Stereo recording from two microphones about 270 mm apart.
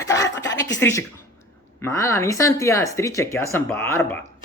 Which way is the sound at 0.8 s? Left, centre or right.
Centre.